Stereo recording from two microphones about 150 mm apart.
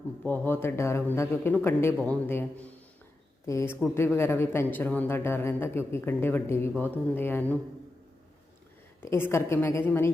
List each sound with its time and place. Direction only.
0.3 s a man's voice: 15° left (ahead or behind)
9.0 s a man's voice: 15° left (ahead or behind)